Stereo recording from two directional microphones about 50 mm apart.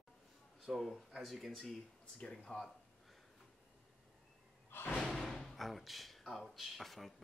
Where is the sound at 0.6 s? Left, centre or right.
Centre.